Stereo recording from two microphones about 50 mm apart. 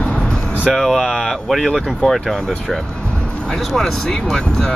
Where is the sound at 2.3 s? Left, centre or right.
Centre.